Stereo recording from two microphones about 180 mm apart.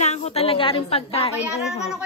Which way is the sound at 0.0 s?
35° left (ahead or behind).